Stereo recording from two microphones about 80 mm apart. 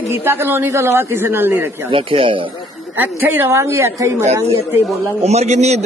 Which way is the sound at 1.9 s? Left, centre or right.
Right.